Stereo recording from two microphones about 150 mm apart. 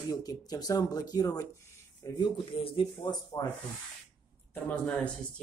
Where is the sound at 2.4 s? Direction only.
35° left (ahead or behind).